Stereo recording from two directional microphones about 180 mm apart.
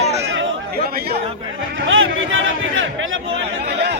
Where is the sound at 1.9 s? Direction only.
90° right.